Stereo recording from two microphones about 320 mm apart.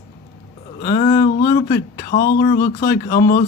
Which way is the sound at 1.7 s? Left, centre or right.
Left.